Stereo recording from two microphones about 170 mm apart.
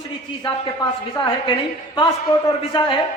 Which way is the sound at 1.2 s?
30° left (ahead or behind).